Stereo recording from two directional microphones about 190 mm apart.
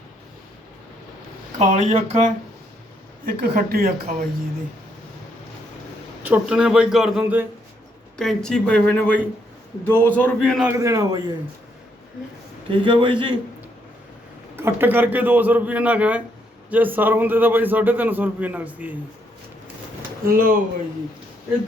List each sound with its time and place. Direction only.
1.5 s speech: 35° right (ahead or behind)
3.2 s speech: 55° right (ahead or behind)
6.2 s a man's voice: 5° right (ahead or behind)
10.7 s a man's voice: 15° right (ahead or behind)
12.7 s a man's voice: 25° right (ahead or behind)
14.5 s a man's voice: 10° right (ahead or behind)
20.2 s speech: 50° right (ahead or behind)